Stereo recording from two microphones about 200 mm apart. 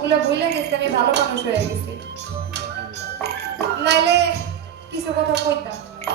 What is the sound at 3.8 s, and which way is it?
Speech, 55° right (ahead or behind).